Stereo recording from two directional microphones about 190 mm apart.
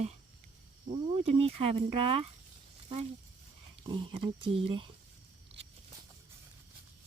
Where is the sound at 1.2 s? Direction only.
30° right (ahead or behind).